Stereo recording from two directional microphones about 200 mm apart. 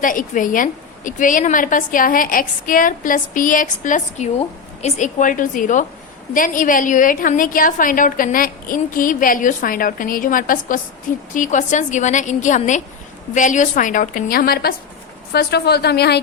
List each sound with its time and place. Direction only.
0.0 s a woman's voice: 40° left (ahead or behind)